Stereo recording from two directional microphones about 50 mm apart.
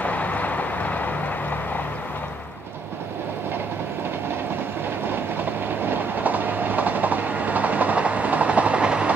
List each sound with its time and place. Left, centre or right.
0.0 s vehicle: left
5.4 s train: right